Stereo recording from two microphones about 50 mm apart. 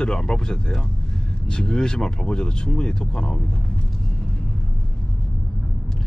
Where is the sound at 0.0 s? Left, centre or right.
Centre.